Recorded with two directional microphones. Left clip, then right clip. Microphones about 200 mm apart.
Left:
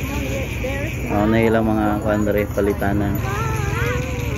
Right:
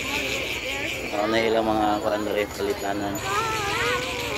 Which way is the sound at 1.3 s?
25° right (ahead or behind).